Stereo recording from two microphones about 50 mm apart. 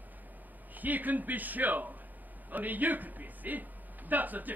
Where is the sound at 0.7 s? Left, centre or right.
Right.